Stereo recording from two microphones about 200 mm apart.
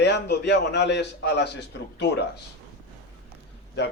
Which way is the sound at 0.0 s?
60° left (ahead or behind).